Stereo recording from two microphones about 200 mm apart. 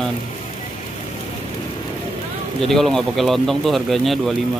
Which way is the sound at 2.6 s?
Centre (ahead or behind).